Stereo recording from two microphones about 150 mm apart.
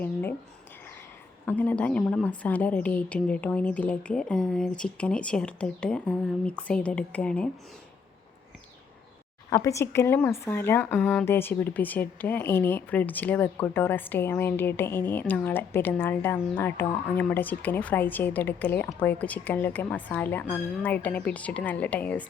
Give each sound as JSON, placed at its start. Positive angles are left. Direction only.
{"t": 0.0, "sound": "a sound", "side_deg": 15}
{"t": 1.5, "sound": "speech", "side_deg": 10}
{"t": 2.4, "sound": "speech", "side_deg": 10}
{"t": 9.5, "sound": "speech", "side_deg": 20}